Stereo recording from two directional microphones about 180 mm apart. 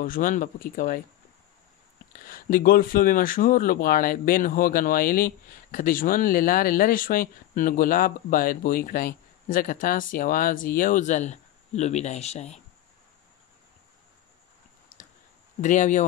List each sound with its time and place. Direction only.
0.0 s speech: 50° left (ahead or behind)
2.2 s speech: 50° left (ahead or behind)
15.6 s speech: 45° left (ahead or behind)